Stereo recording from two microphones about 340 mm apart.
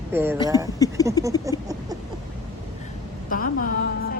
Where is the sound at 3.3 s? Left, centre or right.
Left.